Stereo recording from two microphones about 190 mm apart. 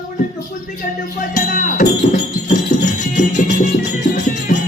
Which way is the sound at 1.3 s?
45° left (ahead or behind).